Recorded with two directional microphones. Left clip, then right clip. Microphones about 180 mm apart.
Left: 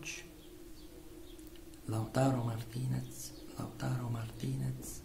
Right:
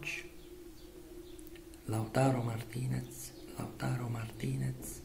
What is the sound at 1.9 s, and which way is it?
A man's voice, 10° left (ahead or behind).